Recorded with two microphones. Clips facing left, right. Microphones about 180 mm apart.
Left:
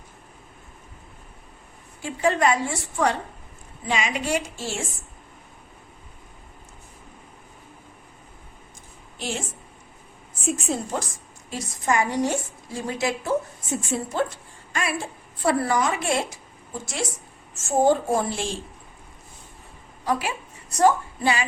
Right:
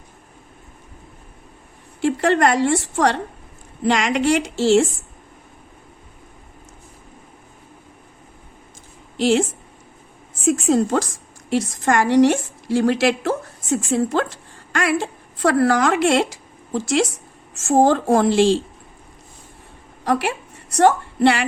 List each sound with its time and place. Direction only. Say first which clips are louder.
2.0 s a woman's voice: right 5 dB; 75° right (ahead or behind)
9.1 s a woman's voice: right 14 dB; 90° right
10.7 s a woman's voice: right 10 dB; 90° right
20.1 s a woman's voice: right 5 dB; 70° right (ahead or behind)